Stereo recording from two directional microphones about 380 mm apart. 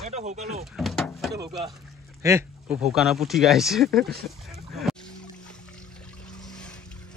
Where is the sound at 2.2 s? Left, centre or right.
Centre.